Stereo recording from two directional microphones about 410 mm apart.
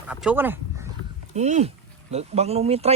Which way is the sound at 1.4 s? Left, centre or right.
Centre.